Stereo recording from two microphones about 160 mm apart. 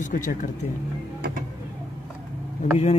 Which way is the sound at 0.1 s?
55° left (ahead or behind).